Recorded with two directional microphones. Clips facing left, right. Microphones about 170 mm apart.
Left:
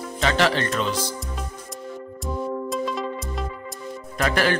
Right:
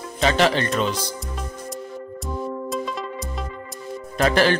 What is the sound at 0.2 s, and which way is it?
Speech, 20° right (ahead or behind).